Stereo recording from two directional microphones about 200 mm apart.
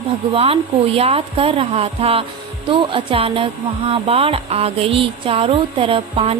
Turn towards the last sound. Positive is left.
turn(degrees=-30)  # may be behind; listen again after turning